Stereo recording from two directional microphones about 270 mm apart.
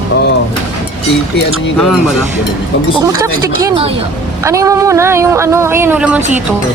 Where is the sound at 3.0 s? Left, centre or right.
Centre.